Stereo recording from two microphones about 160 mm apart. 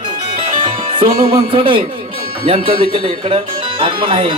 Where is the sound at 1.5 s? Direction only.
35° right (ahead or behind).